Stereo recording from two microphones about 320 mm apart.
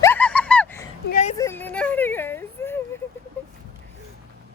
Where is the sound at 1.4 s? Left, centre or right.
Centre.